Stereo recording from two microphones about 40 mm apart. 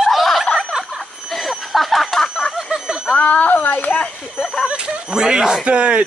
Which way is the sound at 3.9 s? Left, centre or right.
Left.